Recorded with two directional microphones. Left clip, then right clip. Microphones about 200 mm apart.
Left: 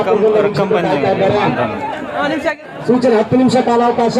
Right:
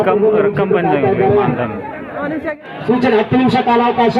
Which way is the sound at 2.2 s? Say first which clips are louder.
Left 4 dB; 65° left (ahead or behind).